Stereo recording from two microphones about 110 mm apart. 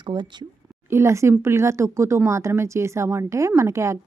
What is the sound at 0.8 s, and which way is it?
Speech, 25° right (ahead or behind).